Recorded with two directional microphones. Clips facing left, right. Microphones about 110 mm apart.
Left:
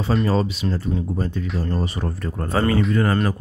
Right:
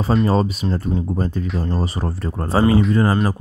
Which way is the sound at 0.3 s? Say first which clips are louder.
Right 2 dB; 40° right (ahead or behind).